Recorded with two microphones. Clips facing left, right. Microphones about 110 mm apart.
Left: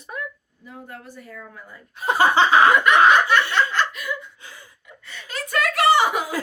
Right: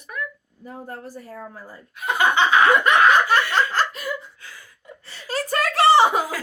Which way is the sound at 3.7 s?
40° right (ahead or behind).